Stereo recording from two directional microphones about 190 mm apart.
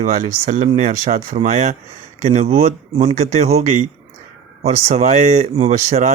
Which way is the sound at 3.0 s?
35° right (ahead or behind).